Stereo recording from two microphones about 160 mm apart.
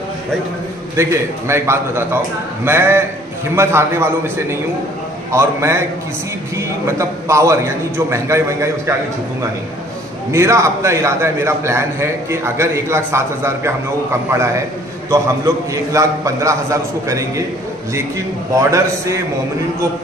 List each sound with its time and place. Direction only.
0.9 s a man's voice: 15° right (ahead or behind)
10.3 s a man's voice: 20° right (ahead or behind)
18.5 s a man's voice: 20° right (ahead or behind)